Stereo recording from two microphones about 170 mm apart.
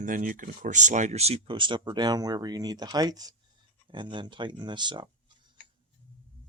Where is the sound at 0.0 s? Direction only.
50° right (ahead or behind); by 5.0 s 25° right (ahead or behind).